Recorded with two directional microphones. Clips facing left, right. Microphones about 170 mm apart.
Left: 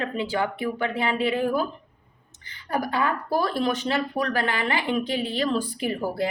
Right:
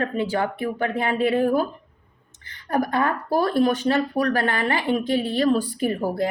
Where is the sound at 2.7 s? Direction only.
50° right (ahead or behind).